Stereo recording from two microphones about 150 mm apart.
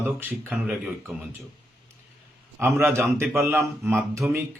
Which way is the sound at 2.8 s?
15° right (ahead or behind).